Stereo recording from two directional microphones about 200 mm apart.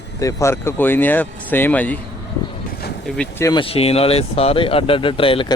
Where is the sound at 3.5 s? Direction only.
30° left (ahead or behind).